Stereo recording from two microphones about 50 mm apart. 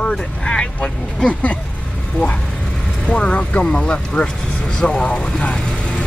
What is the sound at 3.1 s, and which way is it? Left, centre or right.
Speech, left.